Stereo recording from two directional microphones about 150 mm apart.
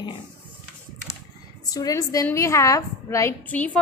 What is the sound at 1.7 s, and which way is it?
A woman's voice, 25° left (ahead or behind).